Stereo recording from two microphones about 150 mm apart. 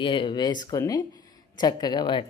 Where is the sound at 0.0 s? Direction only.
35° left (ahead or behind).